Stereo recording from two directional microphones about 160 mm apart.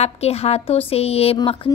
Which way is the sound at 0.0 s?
40° left (ahead or behind).